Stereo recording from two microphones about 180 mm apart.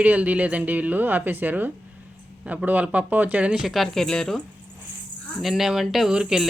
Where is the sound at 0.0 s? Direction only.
10° right (ahead or behind).